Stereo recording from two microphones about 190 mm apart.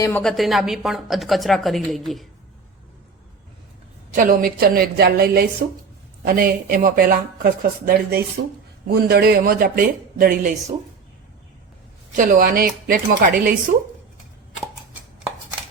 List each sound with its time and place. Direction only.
0.0 s a woman's voice: 5° left (ahead or behind)
4.1 s speech: 45° right (ahead or behind)
12.1 s speech: 50° right (ahead or behind)